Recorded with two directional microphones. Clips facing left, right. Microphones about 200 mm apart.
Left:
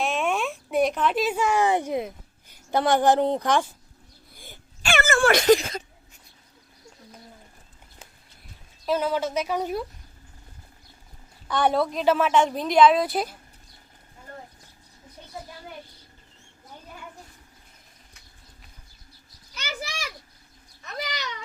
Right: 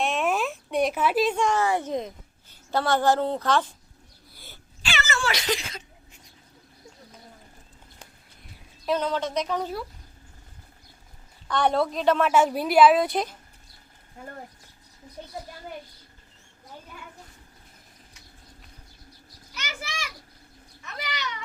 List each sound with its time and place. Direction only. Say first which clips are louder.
0.0 s a sound: even; centre (ahead or behind)
1.2 s a woman's voice: left 1 dB; 5° left (ahead or behind)
4.8 s speech: left 8 dB; 50° left (ahead or behind)
8.9 s a woman's voice: left 1 dB; 5° left (ahead or behind)
11.4 s a woman's voice: left 1 dB; 5° left (ahead or behind)
14.2 s roaring cats: right 5 dB; 55° right (ahead or behind)
19.6 s a sound: left 3 dB; 35° left (ahead or behind)
20.8 s cat: left 2 dB; 40° left (ahead or behind)